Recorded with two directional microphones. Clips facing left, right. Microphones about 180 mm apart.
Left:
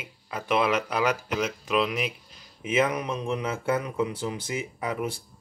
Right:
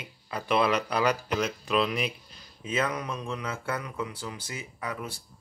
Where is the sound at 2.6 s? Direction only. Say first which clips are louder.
Left 5 dB; 20° left (ahead or behind).